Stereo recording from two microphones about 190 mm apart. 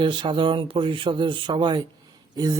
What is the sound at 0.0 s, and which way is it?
A man's voice, 25° right (ahead or behind).